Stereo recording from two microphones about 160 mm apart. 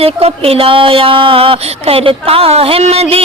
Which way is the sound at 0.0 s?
40° right (ahead or behind).